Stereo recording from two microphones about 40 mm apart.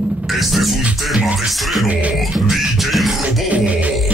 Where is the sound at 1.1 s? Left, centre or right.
Centre.